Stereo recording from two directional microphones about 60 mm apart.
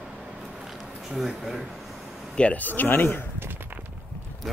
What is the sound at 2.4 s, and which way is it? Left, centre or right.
Speech, left.